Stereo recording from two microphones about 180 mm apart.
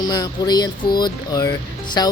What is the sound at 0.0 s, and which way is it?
Speech, 25° left (ahead or behind).